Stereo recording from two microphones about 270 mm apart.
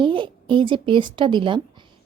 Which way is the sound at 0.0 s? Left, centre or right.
Centre.